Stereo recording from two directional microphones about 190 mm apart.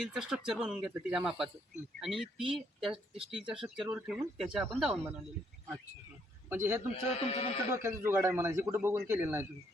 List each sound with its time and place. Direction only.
0.0 s speech: 5° right (ahead or behind)
2.9 s speech: 30° right (ahead or behind)
3.2 s speech: 5° right (ahead or behind)
6.5 s a man's voice: 10° right (ahead or behind)
7.2 s speech: 30° left (ahead or behind)
7.7 s a man's voice: 15° right (ahead or behind)